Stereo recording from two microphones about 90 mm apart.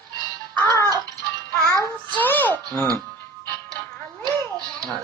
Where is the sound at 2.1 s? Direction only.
20° left (ahead or behind).